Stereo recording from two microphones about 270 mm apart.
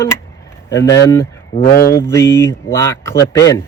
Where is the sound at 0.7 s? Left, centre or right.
Centre.